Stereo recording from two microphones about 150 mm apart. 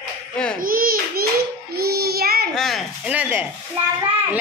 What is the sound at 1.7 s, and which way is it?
Child singing, 90° right.